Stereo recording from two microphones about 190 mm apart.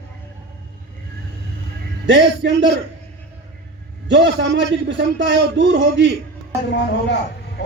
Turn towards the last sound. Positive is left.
turn(degrees=65)  # may be behind; listen again after turning